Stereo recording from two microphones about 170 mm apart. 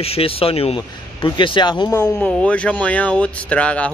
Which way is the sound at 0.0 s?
35° left (ahead or behind).